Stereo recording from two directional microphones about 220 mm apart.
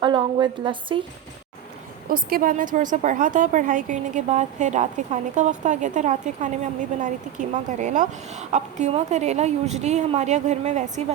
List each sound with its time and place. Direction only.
0.0 s a woman's voice: 20° right (ahead or behind)
2.0 s a woman's voice: 40° right (ahead or behind)